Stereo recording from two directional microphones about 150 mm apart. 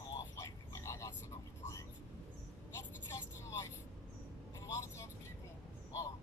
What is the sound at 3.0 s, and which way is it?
Vehicle, 20° left (ahead or behind).